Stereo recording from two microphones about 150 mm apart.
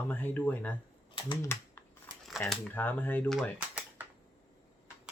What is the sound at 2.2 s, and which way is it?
Speech, centre (ahead or behind).